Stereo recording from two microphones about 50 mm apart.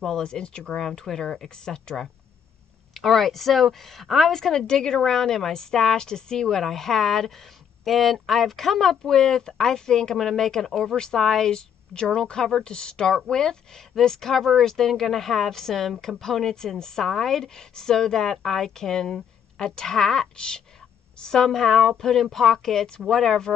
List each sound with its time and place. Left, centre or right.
0.0 s speech: centre
2.9 s speech: centre